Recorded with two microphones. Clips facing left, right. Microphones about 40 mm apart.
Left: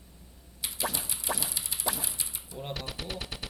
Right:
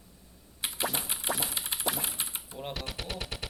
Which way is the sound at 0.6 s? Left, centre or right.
Right.